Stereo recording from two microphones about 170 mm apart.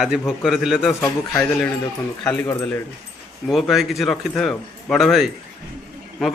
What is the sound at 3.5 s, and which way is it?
Speech, centre (ahead or behind).